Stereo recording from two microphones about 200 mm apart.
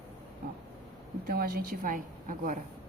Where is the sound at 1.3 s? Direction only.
50° right (ahead or behind).